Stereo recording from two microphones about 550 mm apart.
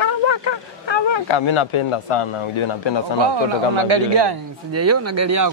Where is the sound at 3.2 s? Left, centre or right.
Right.